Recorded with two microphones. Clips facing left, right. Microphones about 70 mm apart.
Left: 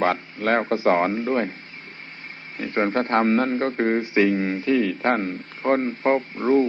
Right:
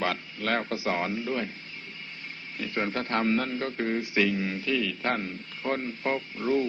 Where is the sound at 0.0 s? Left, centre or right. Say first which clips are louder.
Left 8 dB; left.